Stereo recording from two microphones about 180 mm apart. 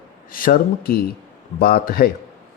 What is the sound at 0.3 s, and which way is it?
A man's voice, 50° left (ahead or behind).